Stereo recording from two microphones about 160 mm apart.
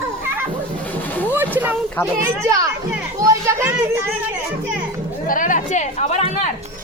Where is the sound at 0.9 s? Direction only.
10° left (ahead or behind).